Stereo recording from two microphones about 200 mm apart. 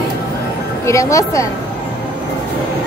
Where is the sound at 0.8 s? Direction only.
15° left (ahead or behind).